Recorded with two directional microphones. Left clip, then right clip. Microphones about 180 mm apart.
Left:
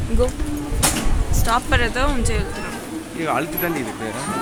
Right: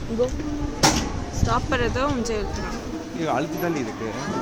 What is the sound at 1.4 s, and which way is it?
Speech, centre (ahead or behind).